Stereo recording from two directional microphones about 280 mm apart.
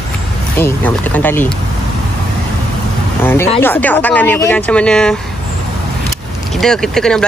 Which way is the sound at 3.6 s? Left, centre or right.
Centre.